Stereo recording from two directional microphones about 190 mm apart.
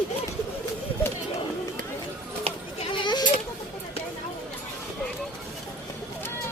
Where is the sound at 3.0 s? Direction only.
25° left (ahead or behind).